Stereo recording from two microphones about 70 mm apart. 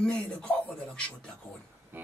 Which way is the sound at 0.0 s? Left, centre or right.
Centre.